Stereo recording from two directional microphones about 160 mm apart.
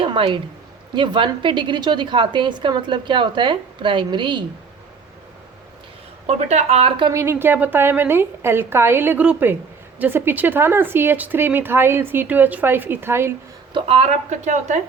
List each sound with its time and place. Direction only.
0.0 s a woman's voice: 35° right (ahead or behind)
6.2 s a woman's voice: 45° right (ahead or behind)
7.1 s speech: 15° right (ahead or behind)
13.7 s speech: 40° right (ahead or behind)